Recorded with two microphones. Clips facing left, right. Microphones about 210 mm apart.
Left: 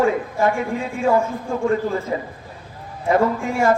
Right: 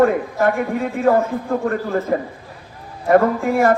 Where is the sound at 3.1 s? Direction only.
55° right (ahead or behind).